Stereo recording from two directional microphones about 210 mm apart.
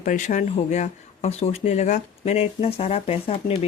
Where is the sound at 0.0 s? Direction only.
35° left (ahead or behind).